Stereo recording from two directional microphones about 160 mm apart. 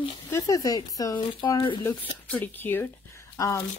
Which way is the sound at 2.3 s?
10° left (ahead or behind).